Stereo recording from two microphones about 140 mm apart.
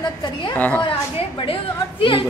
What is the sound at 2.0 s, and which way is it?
Speech, 35° left (ahead or behind).